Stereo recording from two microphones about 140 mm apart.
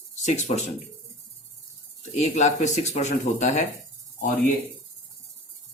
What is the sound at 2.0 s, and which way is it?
Speech, 55° left (ahead or behind).